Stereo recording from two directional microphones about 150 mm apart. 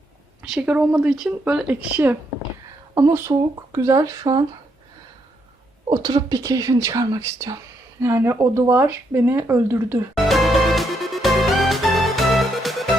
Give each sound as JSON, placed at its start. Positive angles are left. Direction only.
{"t": 0.5, "sound": "speech", "side_deg": -10}
{"t": 5.9, "sound": "speech", "side_deg": -25}
{"t": 10.2, "sound": "music", "side_deg": 0}